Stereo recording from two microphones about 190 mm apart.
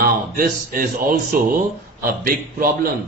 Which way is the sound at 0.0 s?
50° right (ahead or behind).